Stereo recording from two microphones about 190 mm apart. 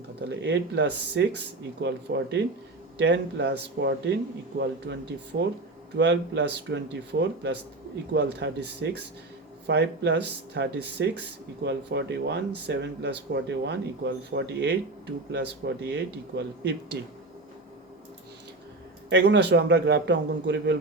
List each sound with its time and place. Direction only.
0.2 s speech: 65° right (ahead or behind)
5.3 s speech: 55° right (ahead or behind)
19.1 s speech: 65° right (ahead or behind)